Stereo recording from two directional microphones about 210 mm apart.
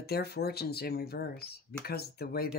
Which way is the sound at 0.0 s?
50° left (ahead or behind).